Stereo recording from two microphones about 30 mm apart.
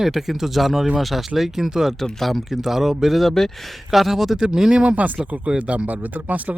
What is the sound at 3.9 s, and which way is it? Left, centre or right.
Speech, centre.